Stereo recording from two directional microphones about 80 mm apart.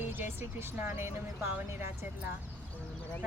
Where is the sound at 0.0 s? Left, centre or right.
Right.